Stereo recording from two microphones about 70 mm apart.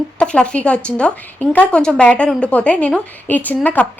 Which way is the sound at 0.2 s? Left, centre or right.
Centre.